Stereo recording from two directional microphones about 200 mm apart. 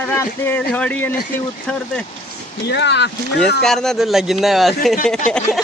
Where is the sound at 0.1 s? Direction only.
10° left (ahead or behind).